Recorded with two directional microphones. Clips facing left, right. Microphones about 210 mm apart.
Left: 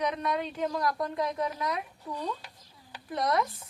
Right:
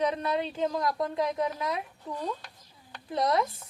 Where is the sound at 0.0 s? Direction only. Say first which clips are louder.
Right 2 dB; 30° right (ahead or behind).